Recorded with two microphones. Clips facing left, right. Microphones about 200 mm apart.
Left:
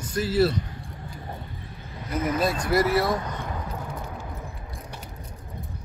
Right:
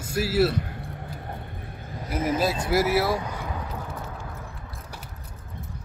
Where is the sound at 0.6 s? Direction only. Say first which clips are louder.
Right 1 dB; 60° right (ahead or behind).